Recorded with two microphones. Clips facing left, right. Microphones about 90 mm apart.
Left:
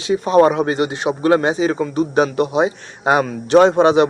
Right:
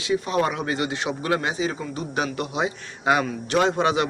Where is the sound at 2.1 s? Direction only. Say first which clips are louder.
Left 9 dB; 35° left (ahead or behind).